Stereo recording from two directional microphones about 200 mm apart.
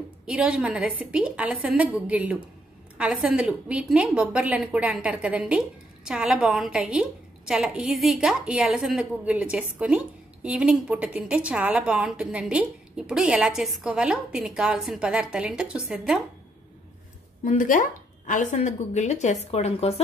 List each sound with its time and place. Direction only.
0.3 s a woman's voice: 5° right (ahead or behind)
17.5 s speech: 40° left (ahead or behind)